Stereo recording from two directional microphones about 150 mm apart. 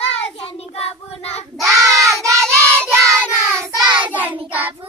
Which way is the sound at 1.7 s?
20° right (ahead or behind).